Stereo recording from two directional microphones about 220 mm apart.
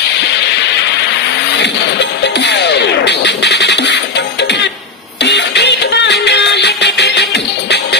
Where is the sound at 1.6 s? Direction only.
50° left (ahead or behind).